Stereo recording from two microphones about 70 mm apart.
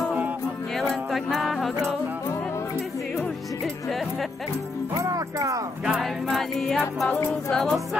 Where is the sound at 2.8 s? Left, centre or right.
Centre.